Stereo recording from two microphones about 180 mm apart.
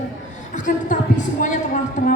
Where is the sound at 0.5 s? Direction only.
45° left (ahead or behind).